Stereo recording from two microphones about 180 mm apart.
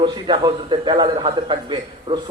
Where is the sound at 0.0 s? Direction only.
25° right (ahead or behind).